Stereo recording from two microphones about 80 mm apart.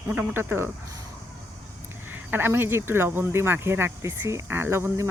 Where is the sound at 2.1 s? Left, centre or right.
Right.